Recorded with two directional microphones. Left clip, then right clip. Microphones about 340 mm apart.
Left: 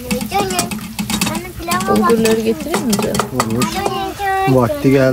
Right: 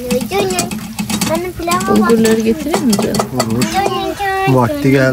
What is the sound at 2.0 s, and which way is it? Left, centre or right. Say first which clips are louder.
Speech: right 1 dB; centre.